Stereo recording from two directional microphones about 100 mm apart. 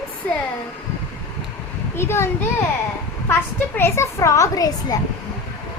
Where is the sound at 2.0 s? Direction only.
25° left (ahead or behind).